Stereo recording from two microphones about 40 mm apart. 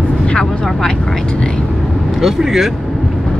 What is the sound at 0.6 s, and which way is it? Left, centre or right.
Vehicle, centre.